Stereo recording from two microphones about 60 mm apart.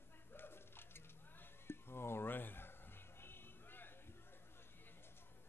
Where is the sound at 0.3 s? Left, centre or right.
Left.